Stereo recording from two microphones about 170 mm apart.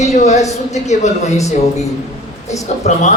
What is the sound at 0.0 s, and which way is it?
A woman's voice, 40° left (ahead or behind).